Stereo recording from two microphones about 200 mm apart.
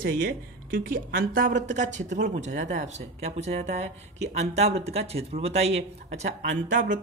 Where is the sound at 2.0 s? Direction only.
60° right (ahead or behind).